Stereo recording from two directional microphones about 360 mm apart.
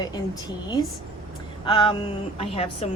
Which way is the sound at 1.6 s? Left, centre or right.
Centre.